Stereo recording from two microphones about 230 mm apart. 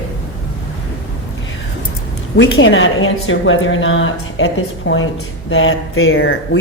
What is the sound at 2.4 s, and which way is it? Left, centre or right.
A woman's voice, left.